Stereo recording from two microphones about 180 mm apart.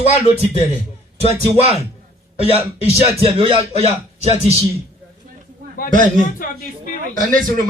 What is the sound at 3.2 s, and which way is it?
Speech, 30° right (ahead or behind).